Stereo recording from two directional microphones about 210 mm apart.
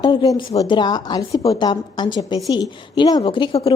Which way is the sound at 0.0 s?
20° left (ahead or behind).